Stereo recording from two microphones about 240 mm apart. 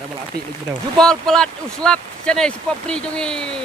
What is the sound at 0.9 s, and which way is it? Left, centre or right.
Speech, centre.